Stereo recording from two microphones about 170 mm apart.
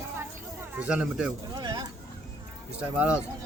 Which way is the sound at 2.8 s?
5° right (ahead or behind).